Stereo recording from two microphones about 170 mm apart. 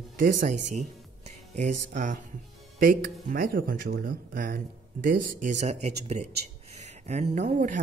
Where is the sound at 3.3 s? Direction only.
60° right (ahead or behind); by 6.3 s 40° right (ahead or behind).